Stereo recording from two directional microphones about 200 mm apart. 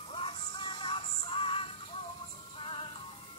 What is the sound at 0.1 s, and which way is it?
Music, 25° left (ahead or behind).